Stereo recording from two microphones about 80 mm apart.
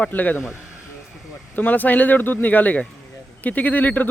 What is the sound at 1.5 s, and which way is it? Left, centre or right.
Speech, left.